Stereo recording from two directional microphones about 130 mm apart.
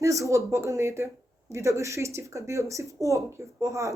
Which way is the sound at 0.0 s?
25° right (ahead or behind).